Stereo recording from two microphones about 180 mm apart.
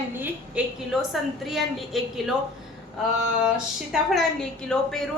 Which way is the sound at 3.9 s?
5° right (ahead or behind).